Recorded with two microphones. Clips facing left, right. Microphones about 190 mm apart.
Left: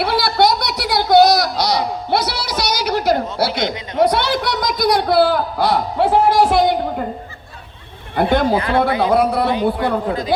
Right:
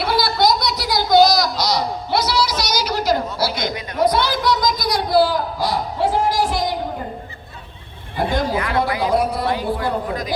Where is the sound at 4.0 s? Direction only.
65° left (ahead or behind).